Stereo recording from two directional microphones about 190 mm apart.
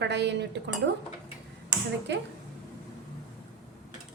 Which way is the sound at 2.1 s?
65° right (ahead or behind).